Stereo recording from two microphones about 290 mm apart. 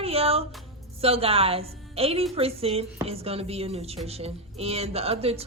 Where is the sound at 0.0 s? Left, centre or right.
Centre.